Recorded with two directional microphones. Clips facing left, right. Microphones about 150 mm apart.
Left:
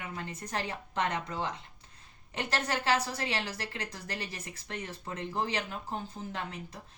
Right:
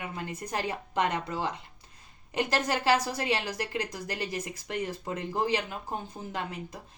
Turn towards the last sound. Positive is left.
turn(degrees=-15)  # may be behind; listen again after turning